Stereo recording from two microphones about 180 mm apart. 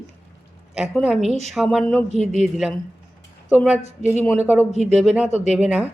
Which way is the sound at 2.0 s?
35° right (ahead or behind).